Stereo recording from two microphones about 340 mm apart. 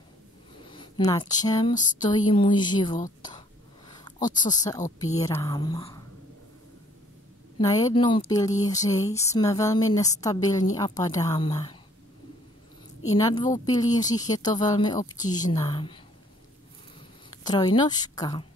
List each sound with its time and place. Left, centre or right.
0.7 s speech: centre
7.5 s speech: centre
13.2 s speech: centre
17.4 s speech: centre